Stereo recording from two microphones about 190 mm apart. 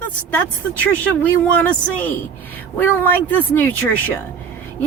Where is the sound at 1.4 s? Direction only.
10° left (ahead or behind).